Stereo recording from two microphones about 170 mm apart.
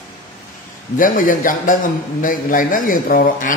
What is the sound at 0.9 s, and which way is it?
A man's voice, 50° left (ahead or behind).